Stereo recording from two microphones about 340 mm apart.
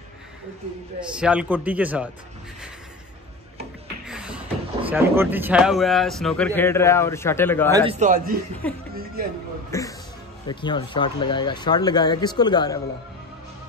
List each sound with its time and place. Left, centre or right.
1.1 s a man's voice: centre
4.1 s a sound: centre
4.8 s a man's voice: centre
7.9 s a man's voice: right
8.6 s a man's voice: centre